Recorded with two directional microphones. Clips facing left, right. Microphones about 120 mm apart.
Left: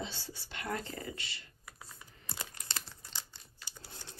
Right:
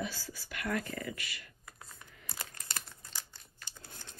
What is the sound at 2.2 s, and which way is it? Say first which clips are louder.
Crumpling: left 1 dB; 25° left (ahead or behind).